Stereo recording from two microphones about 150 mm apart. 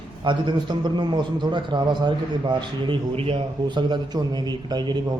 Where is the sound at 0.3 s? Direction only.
30° right (ahead or behind).